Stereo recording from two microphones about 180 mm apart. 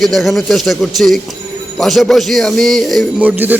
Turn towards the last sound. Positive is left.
turn(degrees=-10)  # may be behind; listen again after turning